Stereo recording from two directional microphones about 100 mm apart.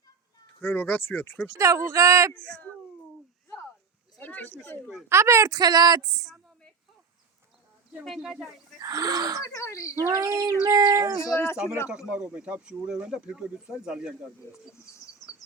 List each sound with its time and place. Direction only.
0.6 s speech: 20° left (ahead or behind)
1.5 s speech: 30° right (ahead or behind)
4.2 s speech: 15° left (ahead or behind)
5.0 s speech: 25° right (ahead or behind)
8.0 s speech: centre (ahead or behind)
8.8 s speech: 35° right (ahead or behind)
9.5 s speech: 30° left (ahead or behind)
10.2 s child singing: 40° right (ahead or behind)
10.7 s speech: 40° right (ahead or behind)
11.2 s speech: 30° left (ahead or behind)
11.9 s speech: 10° right (ahead or behind)
14.9 s bird: 30° left (ahead or behind)